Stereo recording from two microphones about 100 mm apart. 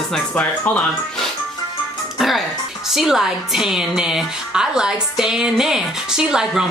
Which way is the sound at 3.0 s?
5° right (ahead or behind).